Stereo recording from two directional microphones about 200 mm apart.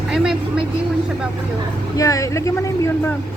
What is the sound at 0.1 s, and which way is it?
Vehicle, 5° right (ahead or behind).